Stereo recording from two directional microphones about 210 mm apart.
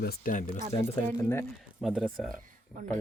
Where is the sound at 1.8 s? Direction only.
Centre (ahead or behind).